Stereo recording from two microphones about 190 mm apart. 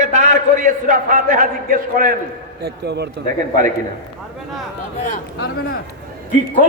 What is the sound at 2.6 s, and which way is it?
Speech, 60° right (ahead or behind).